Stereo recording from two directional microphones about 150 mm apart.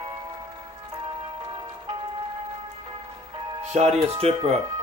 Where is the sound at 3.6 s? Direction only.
50° right (ahead or behind).